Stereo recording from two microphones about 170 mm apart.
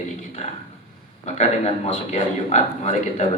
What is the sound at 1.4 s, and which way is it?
Speech, 40° left (ahead or behind).